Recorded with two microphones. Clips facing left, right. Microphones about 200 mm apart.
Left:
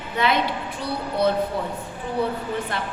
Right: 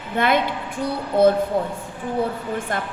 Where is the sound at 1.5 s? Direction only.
50° right (ahead or behind).